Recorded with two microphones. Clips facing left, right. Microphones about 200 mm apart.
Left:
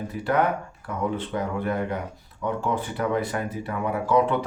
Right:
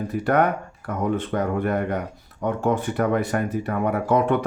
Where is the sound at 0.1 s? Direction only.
55° right (ahead or behind).